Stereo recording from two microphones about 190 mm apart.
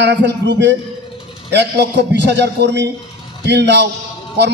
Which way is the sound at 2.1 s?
65° right (ahead or behind).